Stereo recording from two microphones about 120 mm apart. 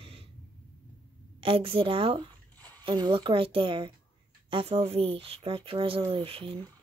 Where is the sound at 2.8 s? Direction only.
40° right (ahead or behind).